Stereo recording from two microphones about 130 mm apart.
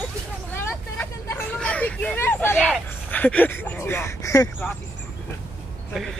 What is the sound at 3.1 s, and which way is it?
Speech, 10° left (ahead or behind).